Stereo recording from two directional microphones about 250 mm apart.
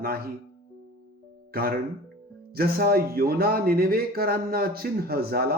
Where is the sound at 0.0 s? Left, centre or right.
Right.